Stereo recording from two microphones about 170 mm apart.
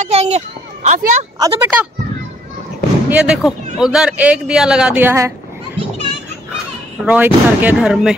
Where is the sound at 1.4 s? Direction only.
15° right (ahead or behind).